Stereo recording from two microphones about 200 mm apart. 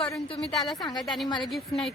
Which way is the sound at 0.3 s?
Centre (ahead or behind).